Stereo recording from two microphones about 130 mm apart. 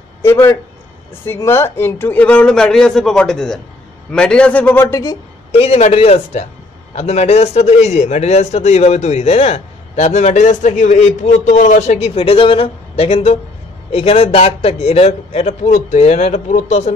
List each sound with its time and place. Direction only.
0.2 s speech: 20° left (ahead or behind)
5.5 s a man's voice: 50° left (ahead or behind)